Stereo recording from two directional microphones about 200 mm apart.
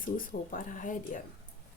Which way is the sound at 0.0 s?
45° left (ahead or behind).